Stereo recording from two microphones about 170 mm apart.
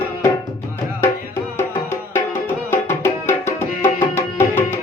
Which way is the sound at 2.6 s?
15° left (ahead or behind).